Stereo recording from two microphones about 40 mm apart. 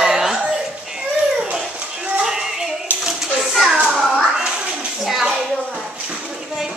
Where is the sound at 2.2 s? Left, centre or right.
Centre.